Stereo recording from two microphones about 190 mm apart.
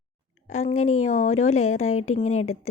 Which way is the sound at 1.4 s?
90° left.